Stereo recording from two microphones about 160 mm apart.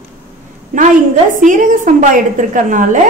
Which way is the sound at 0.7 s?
60° right (ahead or behind).